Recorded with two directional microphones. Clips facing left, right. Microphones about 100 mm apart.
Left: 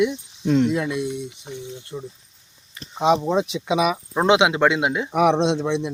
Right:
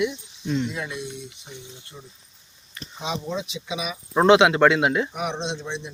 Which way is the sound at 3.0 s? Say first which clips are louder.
Left 11 dB; 55° left (ahead or behind).